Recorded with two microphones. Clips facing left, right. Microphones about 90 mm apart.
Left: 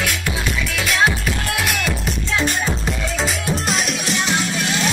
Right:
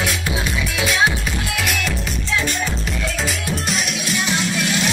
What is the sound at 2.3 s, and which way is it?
Music, 40° left (ahead or behind).